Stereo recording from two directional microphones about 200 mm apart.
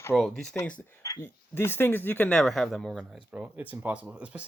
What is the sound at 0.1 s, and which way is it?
Speech, centre (ahead or behind).